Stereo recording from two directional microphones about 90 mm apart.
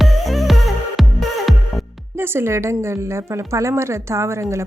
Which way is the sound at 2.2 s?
25° right (ahead or behind).